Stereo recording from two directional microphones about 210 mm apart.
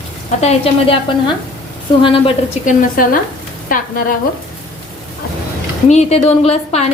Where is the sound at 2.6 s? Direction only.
40° left (ahead or behind).